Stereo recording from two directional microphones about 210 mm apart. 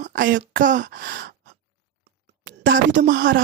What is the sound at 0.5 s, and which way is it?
Speech, 40° right (ahead or behind).